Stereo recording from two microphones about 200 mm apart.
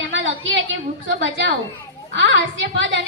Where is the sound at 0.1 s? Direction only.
75° right (ahead or behind).